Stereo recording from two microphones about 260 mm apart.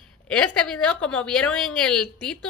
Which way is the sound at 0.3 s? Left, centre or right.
Centre.